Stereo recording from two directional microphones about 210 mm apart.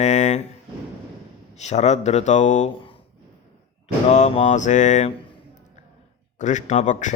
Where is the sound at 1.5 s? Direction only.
30° left (ahead or behind).